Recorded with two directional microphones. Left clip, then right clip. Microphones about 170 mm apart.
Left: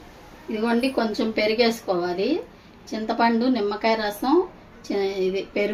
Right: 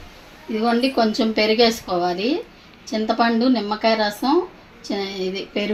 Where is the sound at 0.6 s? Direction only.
50° right (ahead or behind).